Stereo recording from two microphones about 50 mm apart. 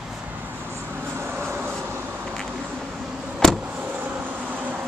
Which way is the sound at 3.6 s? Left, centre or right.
Right.